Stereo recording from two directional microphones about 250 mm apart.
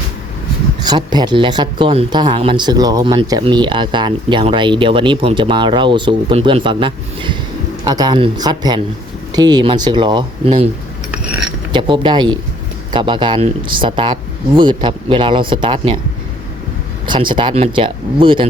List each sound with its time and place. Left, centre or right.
0.9 s speech: centre
11.7 s speech: centre
17.1 s speech: centre